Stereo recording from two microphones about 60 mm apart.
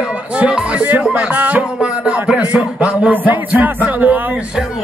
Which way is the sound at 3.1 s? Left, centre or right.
Right.